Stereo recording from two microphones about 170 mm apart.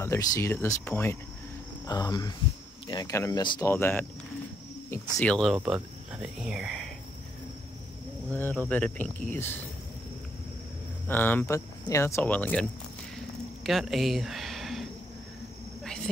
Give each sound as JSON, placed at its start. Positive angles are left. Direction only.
{"t": 0.0, "sound": "speech", "side_deg": 15}
{"t": 3.7, "sound": "speech", "side_deg": 15}
{"t": 5.2, "sound": "speech", "side_deg": 5}
{"t": 8.3, "sound": "speech", "side_deg": 10}
{"t": 11.1, "sound": "speech", "side_deg": 10}
{"t": 13.7, "sound": "speech", "side_deg": 0}